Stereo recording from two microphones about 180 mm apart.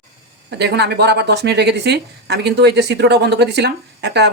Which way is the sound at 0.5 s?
65° right (ahead or behind).